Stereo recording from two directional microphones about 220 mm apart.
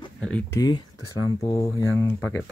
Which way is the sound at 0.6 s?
20° left (ahead or behind).